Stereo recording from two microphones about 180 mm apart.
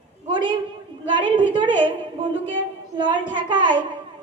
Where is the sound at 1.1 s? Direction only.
25° right (ahead or behind).